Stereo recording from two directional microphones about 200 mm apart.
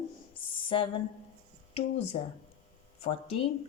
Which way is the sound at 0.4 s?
25° left (ahead or behind).